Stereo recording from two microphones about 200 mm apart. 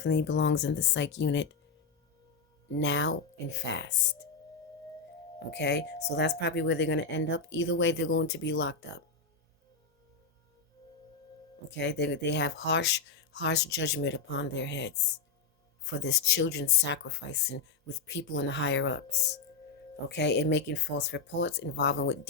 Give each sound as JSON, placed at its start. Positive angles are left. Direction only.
{"t": 0.0, "sound": "speech", "side_deg": 60}
{"t": 2.7, "sound": "speech", "side_deg": 65}
{"t": 5.5, "sound": "speech", "side_deg": 60}
{"t": 11.7, "sound": "speech", "side_deg": 60}